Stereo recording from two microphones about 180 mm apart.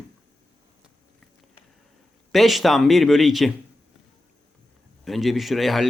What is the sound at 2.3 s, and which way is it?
Speech, centre (ahead or behind).